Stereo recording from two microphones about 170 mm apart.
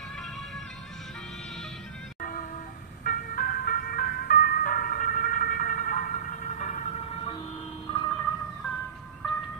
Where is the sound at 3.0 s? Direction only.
55° left (ahead or behind).